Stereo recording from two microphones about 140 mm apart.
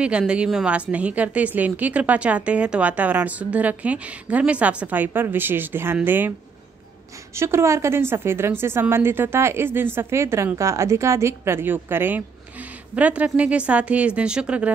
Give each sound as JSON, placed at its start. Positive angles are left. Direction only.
{"t": 0.3, "sound": "a woman's voice", "side_deg": -5}
{"t": 7.3, "sound": "a woman's voice", "side_deg": -20}